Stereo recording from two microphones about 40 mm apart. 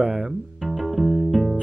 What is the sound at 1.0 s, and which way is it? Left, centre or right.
Music, centre.